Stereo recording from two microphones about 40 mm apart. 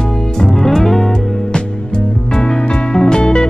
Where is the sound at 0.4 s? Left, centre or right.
Centre.